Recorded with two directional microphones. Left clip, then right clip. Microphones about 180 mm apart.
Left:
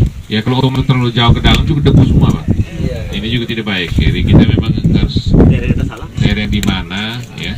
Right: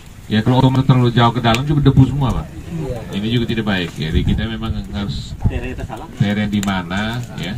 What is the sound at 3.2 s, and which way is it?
Speech, centre (ahead or behind).